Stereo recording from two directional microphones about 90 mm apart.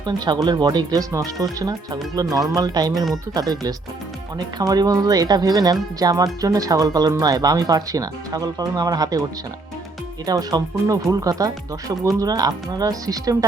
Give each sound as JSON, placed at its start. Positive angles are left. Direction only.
{"t": 0.0, "sound": "speech", "side_deg": -55}
{"t": 10.2, "sound": "speech", "side_deg": -45}